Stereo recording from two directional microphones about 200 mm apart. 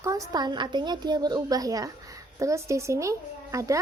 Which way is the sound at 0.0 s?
15° right (ahead or behind).